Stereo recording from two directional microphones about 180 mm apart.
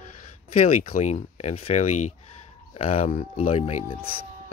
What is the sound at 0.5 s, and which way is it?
Speech, 35° left (ahead or behind).